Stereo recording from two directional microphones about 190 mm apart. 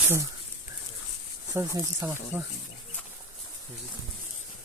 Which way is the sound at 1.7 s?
15° right (ahead or behind).